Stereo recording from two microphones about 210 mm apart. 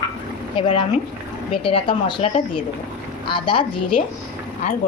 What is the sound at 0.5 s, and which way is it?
Speech, 25° left (ahead or behind).